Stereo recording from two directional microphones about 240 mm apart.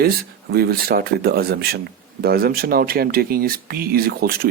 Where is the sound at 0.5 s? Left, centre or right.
Right.